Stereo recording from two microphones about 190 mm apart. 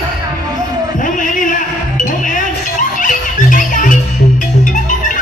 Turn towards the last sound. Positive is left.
turn(degrees=45)  # may be behind; listen again after turning